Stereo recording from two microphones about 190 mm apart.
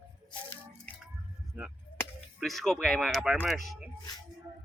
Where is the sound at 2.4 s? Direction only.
Centre (ahead or behind).